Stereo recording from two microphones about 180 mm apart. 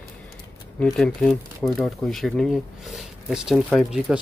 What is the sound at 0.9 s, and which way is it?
Speech, 5° left (ahead or behind).